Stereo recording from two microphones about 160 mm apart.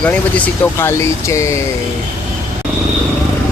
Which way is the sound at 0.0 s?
10° left (ahead or behind).